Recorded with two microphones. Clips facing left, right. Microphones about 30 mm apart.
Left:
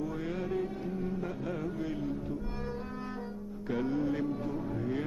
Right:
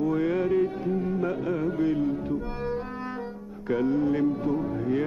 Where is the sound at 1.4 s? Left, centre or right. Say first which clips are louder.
Right 8 dB; right.